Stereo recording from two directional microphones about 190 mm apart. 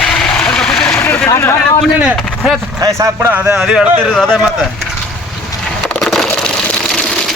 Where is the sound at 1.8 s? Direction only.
5° right (ahead or behind).